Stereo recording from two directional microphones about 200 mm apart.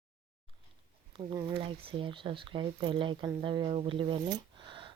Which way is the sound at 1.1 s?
30° right (ahead or behind).